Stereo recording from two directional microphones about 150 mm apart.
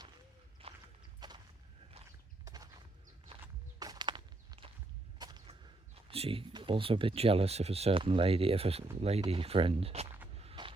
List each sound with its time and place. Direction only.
0.6 s horse: 40° right (ahead or behind)
1.2 s walk: 30° right (ahead or behind)
2.4 s walk: 25° right (ahead or behind)
5.5 s speech: 40° right (ahead or behind)
10.3 s a sound: 40° right (ahead or behind)